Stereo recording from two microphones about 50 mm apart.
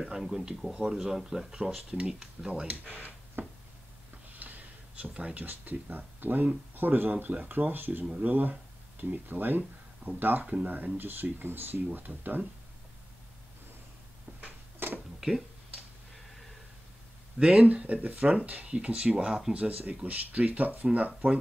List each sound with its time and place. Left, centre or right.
0.0 s speech: centre
0.7 s speech: centre
0.9 s speech: centre
2.9 s speech: right
4.4 s a sound: right
5.4 s speech: right
14.8 s tick-tock: right
15.1 s a sound: centre
17.6 s speech: right